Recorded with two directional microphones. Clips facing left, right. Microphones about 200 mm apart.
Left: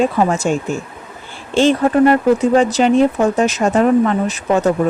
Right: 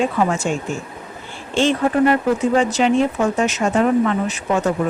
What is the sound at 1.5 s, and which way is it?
Speech, 35° left (ahead or behind).